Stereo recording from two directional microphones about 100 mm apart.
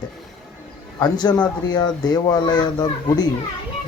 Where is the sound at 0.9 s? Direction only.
45° left (ahead or behind).